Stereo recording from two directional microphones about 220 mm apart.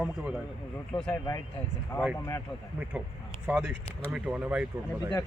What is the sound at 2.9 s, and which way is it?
A man's voice, 5° right (ahead or behind).